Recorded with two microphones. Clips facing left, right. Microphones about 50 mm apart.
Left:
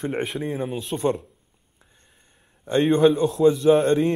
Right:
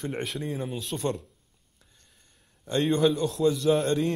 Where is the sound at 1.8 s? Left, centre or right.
Left.